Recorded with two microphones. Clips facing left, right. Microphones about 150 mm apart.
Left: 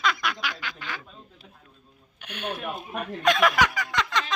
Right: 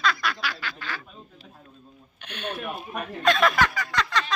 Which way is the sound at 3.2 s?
15° left (ahead or behind).